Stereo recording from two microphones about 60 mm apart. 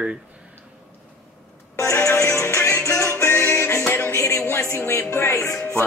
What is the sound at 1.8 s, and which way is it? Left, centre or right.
Music, left.